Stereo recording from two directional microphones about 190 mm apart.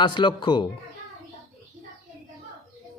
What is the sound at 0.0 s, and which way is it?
Speech, 25° left (ahead or behind).